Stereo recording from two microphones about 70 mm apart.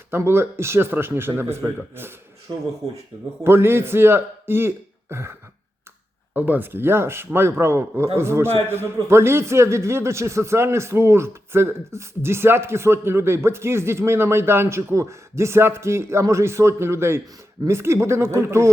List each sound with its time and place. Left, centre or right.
0.3 s a man's voice: right
3.4 s a man's voice: right
6.3 s a man's voice: right